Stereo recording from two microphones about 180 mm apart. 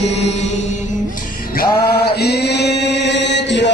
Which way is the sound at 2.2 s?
65° left (ahead or behind).